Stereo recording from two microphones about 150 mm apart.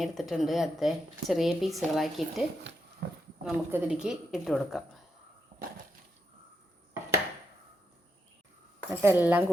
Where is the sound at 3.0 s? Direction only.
90° right.